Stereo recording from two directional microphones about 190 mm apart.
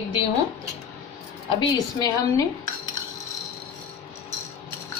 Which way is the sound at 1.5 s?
20° left (ahead or behind).